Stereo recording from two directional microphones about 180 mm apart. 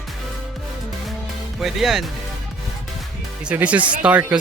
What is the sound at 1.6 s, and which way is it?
Speech, centre (ahead or behind).